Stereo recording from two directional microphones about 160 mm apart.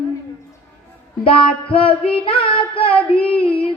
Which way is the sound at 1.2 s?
35° left (ahead or behind).